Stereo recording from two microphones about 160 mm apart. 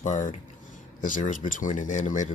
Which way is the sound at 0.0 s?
50° left (ahead or behind).